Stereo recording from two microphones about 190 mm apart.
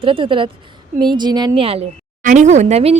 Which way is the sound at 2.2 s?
40° right (ahead or behind).